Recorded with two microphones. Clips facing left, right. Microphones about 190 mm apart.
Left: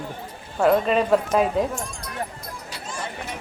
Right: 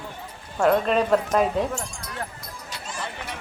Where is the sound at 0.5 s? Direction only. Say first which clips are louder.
Left 1 dB; 5° left (ahead or behind).